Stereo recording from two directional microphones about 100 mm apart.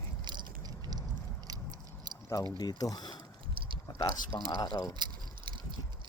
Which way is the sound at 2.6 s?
40° left (ahead or behind).